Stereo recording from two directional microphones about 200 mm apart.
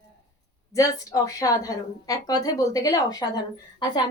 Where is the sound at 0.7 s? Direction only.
15° left (ahead or behind).